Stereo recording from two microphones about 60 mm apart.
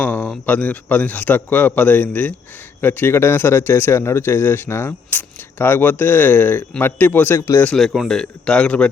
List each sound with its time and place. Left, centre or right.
0.0 s a man's voice: left
7.9 s speech: centre